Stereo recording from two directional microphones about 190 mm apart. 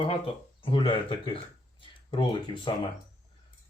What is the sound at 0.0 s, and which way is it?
Speech, 30° left (ahead or behind).